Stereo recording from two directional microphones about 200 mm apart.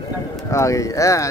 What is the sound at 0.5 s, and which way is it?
Speech, 15° left (ahead or behind).